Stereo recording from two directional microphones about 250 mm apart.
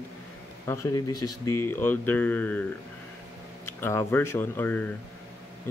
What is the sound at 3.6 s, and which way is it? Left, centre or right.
Speech, centre.